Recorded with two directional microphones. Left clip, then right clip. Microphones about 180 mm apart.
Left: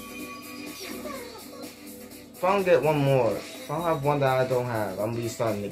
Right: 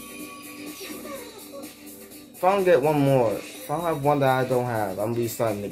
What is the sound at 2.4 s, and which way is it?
A man's voice, 65° right (ahead or behind).